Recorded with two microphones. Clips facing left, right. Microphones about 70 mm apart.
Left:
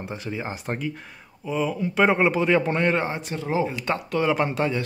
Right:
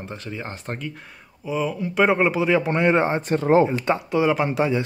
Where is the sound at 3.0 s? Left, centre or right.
Right.